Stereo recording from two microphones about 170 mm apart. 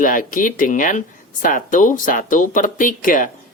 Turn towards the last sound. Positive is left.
turn(degrees=50)  # may be behind; listen again after turning